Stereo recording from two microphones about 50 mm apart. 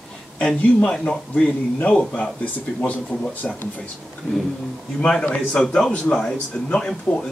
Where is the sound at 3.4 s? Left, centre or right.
Left.